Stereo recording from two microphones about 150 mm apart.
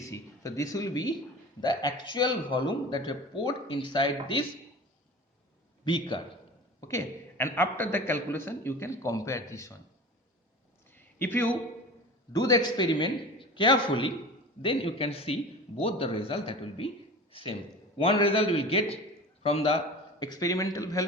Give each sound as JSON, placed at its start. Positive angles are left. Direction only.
{"t": 0.0, "sound": "a man's voice", "side_deg": 20}
{"t": 5.8, "sound": "a man's voice", "side_deg": 30}
{"t": 6.8, "sound": "a man's voice", "side_deg": 20}
{"t": 10.9, "sound": "a sound", "side_deg": 10}
{"t": 12.3, "sound": "a man's voice", "side_deg": 25}
{"t": 17.9, "sound": "a man's voice", "side_deg": 35}
{"t": 20.1, "sound": "a man's voice", "side_deg": 25}